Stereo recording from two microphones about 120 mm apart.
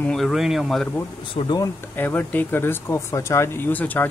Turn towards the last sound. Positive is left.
turn(degrees=15)  # may be behind; listen again after turning